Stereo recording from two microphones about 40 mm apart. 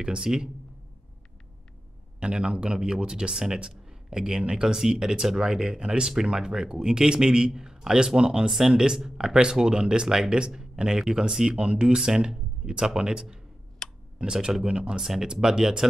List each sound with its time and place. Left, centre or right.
0.0 s speech: right
2.1 s speech: right
13.8 s clicking: centre
14.1 s speech: centre